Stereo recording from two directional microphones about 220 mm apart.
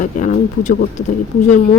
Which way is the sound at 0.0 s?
35° left (ahead or behind).